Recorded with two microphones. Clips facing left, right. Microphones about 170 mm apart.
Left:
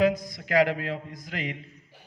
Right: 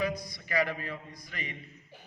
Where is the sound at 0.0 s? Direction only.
90° left.